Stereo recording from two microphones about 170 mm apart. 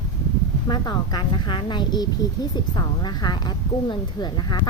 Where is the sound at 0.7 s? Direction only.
25° left (ahead or behind).